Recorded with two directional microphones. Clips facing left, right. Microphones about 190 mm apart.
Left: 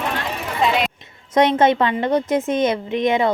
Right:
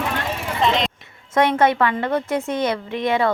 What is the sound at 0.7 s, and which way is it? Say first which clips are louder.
Speech: right 1 dB; 5° left (ahead or behind).